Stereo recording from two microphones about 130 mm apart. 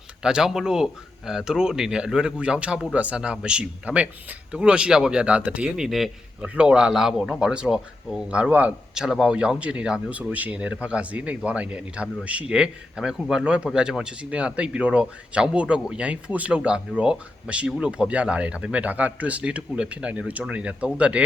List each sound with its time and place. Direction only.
0.2 s speech: 5° right (ahead or behind)